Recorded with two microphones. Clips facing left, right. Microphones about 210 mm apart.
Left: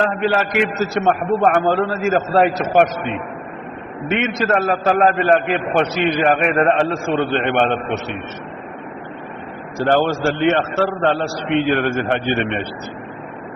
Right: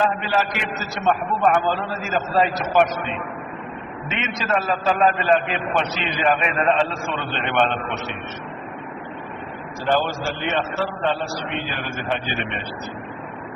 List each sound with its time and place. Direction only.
0.0 s a man's voice: 60° left (ahead or behind)
4.1 s a man's voice: 55° left (ahead or behind)
9.7 s a man's voice: 60° left (ahead or behind)